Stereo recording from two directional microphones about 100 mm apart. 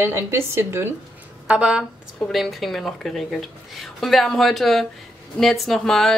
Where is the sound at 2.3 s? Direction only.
Centre (ahead or behind).